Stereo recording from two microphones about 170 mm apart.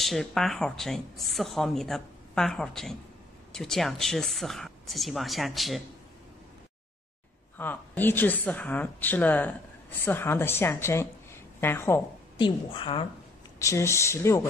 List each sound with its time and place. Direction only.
0.0 s speech: centre (ahead or behind)
7.5 s a woman's voice: 10° left (ahead or behind)
12.4 s a woman's voice: 30° left (ahead or behind)
13.6 s speech: 15° left (ahead or behind)